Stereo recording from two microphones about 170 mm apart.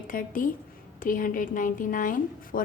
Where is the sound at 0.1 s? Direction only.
55° left (ahead or behind).